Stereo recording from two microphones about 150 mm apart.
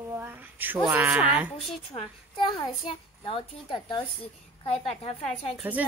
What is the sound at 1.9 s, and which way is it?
A child's voice, 35° left (ahead or behind).